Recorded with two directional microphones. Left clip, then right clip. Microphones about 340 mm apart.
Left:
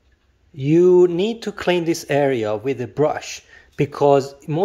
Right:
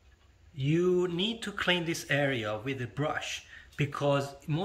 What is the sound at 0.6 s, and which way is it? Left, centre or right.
Speech, centre.